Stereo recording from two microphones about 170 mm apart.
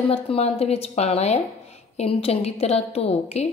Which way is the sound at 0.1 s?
35° left (ahead or behind).